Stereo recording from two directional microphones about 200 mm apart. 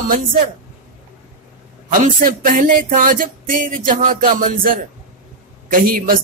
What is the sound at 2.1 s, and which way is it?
Music, 40° right (ahead or behind).